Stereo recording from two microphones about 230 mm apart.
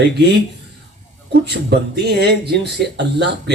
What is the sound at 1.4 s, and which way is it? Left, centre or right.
Speech, right.